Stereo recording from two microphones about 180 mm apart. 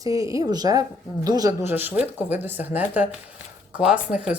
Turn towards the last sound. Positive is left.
turn(degrees=-5)  # may be behind; listen again after turning